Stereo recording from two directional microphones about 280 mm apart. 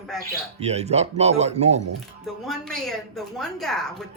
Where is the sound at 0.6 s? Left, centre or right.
Right.